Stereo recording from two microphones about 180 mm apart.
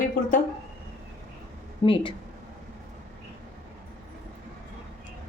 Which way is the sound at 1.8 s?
30° left (ahead or behind).